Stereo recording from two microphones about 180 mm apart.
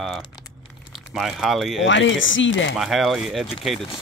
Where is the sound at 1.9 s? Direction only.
90° left.